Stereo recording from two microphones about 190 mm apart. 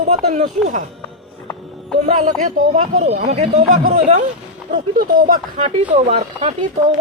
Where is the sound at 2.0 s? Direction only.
45° right (ahead or behind).